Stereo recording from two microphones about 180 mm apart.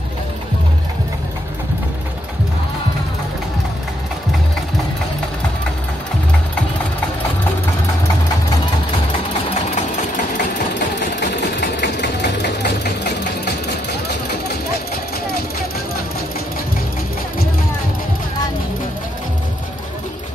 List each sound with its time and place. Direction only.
11.8 s engine: 70° left (ahead or behind)